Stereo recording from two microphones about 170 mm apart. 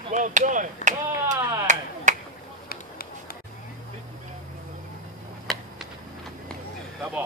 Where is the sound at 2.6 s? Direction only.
60° left (ahead or behind).